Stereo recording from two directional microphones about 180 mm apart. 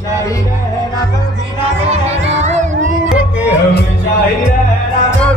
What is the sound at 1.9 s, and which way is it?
Music, 35° right (ahead or behind).